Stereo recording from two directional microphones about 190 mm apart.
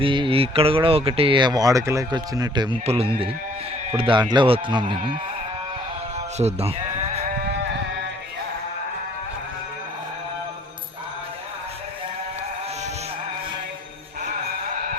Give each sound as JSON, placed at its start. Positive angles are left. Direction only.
{"t": 0.0, "sound": "speech", "side_deg": -25}
{"t": 6.3, "sound": "bleat", "side_deg": -35}